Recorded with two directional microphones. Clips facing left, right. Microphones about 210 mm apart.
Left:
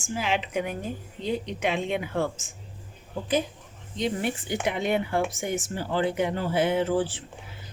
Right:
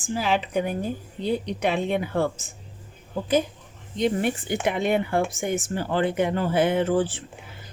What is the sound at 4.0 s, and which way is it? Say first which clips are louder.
Speech: right 4 dB; 50° right (ahead or behind).